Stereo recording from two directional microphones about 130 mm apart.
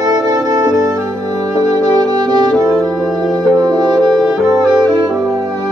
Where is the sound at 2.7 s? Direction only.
Centre (ahead or behind).